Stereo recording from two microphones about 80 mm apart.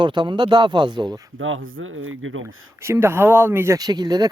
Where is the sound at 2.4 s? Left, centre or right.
Right.